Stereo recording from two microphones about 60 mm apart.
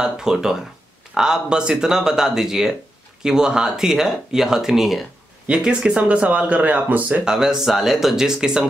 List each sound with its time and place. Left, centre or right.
0.0 s speech: centre
5.5 s speech: centre
7.2 s speech: centre